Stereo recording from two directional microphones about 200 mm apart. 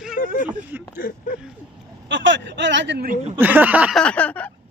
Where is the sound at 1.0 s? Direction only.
45° left (ahead or behind).